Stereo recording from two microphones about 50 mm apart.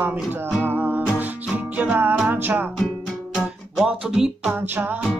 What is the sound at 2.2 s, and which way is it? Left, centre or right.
Music, right.